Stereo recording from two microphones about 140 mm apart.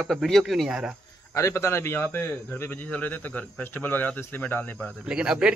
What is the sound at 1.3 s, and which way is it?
A man's voice, 20° left (ahead or behind).